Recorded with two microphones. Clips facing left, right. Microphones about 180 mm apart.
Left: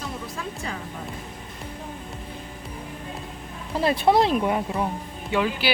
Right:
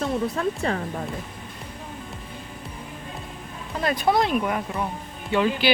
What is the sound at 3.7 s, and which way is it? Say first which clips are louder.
Speech: left 2 dB; 30° left (ahead or behind).